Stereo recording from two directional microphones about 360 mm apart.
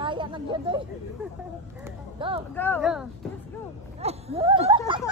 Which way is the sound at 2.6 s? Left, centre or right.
Centre.